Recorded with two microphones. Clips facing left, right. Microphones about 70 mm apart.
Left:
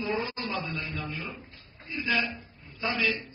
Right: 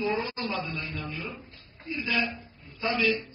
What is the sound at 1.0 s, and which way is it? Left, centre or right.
Speech, left.